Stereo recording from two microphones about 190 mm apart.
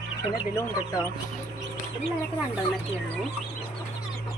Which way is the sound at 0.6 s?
20° left (ahead or behind).